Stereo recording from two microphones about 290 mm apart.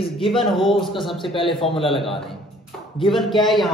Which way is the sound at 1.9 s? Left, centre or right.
Centre.